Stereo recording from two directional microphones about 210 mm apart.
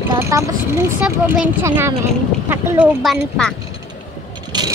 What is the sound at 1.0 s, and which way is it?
Speech, 5° right (ahead or behind).